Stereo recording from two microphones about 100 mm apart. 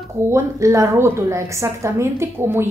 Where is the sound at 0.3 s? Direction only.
30° right (ahead or behind).